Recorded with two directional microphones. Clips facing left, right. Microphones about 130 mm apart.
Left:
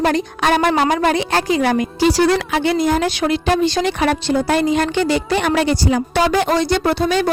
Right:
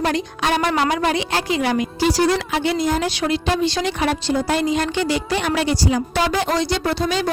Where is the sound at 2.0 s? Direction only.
65° left (ahead or behind).